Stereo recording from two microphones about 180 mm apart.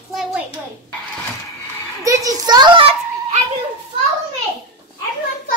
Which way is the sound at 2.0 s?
20° right (ahead or behind).